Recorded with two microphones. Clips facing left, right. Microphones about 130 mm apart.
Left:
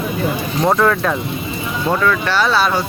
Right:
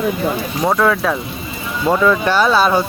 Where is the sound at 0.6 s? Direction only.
Centre (ahead or behind).